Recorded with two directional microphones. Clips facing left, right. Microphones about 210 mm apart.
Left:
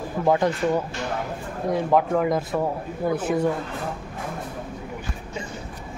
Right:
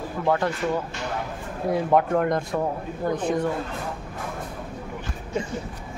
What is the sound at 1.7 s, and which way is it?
Speech, centre (ahead or behind).